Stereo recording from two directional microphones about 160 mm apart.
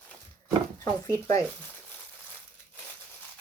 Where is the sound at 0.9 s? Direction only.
20° left (ahead or behind).